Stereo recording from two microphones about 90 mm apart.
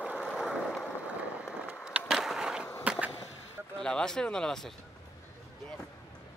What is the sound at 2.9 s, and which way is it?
Skateboard, 15° right (ahead or behind).